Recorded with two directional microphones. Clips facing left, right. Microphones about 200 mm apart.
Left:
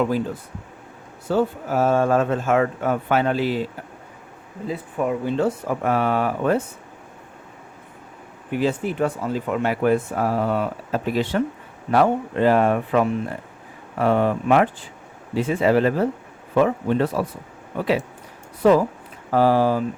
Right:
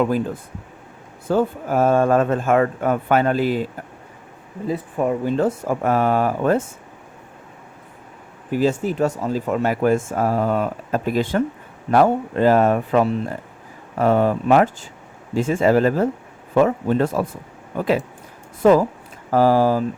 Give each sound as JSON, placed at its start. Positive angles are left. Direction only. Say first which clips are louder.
{"t": 1.3, "sound": "speech", "louder": "right 2 dB", "side_deg": -50}
{"t": 4.7, "sound": "speech", "louder": "right 3 dB", "side_deg": -45}
{"t": 8.4, "sound": "speech", "louder": "right 3 dB", "side_deg": -40}
{"t": 18.6, "sound": "speech", "louder": "right 2 dB", "side_deg": -45}